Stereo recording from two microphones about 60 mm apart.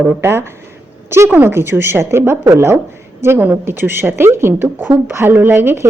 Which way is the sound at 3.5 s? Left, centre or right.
Right.